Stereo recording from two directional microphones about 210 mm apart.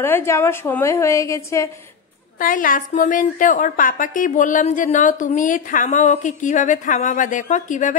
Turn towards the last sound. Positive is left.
turn(degrees=35)  # may be behind; listen again after turning